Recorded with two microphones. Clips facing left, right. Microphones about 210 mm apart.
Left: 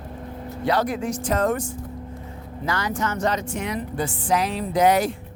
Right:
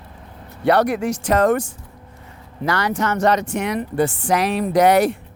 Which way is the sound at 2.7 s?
70° right (ahead or behind).